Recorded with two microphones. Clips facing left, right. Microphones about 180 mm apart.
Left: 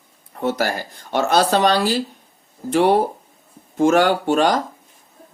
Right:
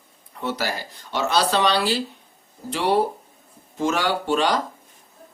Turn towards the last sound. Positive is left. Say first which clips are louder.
# left 4 dB
turn(degrees=50)  # may be behind; listen again after turning